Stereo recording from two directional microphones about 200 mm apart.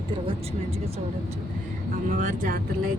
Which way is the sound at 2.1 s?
40° right (ahead or behind).